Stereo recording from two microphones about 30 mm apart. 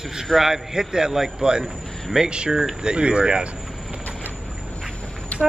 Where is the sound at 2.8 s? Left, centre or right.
Right.